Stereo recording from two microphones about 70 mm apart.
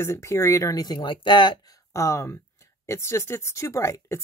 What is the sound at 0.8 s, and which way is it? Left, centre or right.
Speech, left.